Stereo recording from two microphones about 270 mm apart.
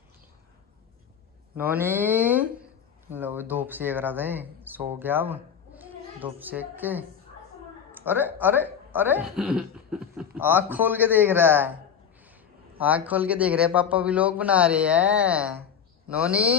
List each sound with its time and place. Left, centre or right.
1.6 s speech: centre